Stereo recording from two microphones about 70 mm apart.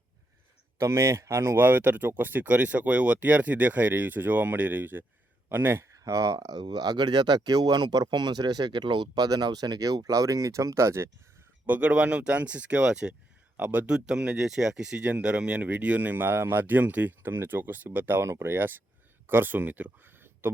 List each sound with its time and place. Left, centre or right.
0.8 s speech: right
1.5 s speech: right
6.0 s speech: right
11.6 s speech: right
13.6 s speech: right
18.5 s speech: right